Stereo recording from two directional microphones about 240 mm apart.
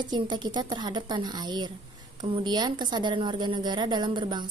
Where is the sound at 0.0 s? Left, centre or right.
Centre.